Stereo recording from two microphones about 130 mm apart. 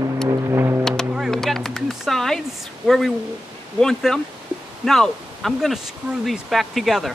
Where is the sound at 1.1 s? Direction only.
Centre (ahead or behind).